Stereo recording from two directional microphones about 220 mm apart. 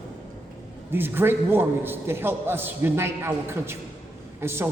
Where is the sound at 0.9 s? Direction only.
10° right (ahead or behind).